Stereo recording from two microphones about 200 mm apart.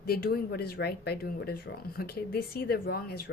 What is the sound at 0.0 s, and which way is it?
A woman's voice, 50° left (ahead or behind).